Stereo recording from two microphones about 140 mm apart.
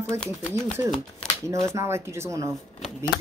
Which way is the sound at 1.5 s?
20° right (ahead or behind).